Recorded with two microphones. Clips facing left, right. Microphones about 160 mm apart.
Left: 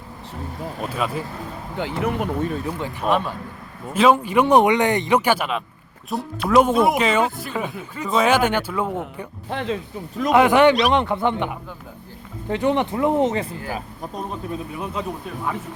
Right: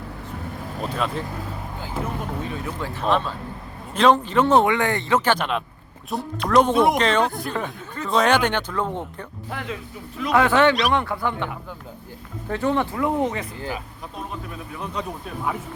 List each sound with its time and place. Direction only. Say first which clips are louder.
0.8 s speech: even; 5° left (ahead or behind)
1.8 s speech: left 7 dB; 75° left (ahead or behind)
2.8 s speech: even; 10° left (ahead or behind)
9.5 s speech: left 6 dB; 30° left (ahead or behind)
10.3 s speech: left 3 dB; 15° left (ahead or behind)
13.7 s speech: left 2 dB; 35° left (ahead or behind)
15.0 s speech: left 2 dB; 5° left (ahead or behind)